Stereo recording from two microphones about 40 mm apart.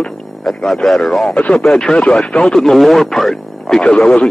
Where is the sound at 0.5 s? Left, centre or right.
Centre.